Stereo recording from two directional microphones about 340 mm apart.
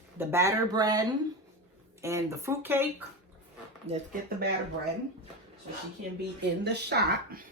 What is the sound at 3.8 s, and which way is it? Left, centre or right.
Speech, right.